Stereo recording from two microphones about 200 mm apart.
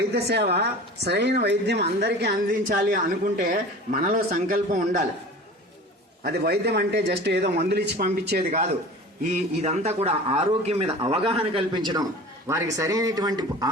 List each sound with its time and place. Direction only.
0.0 s a woman's voice: 55° right (ahead or behind)
4.0 s a man's voice: 45° right (ahead or behind)
6.2 s a woman's voice: 55° right (ahead or behind)
8.4 s a man's voice: 35° right (ahead or behind)